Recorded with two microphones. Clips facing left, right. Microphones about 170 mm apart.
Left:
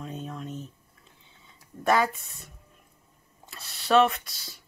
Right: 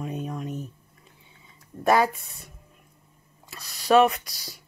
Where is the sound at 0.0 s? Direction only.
15° right (ahead or behind).